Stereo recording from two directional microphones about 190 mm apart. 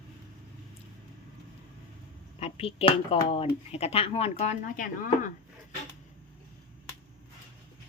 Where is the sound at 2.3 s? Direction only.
30° left (ahead or behind).